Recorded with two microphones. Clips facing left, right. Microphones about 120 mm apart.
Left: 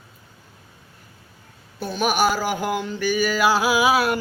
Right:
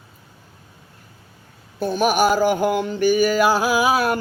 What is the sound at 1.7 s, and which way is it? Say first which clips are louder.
Speech: right 4 dB; 50° right (ahead or behind).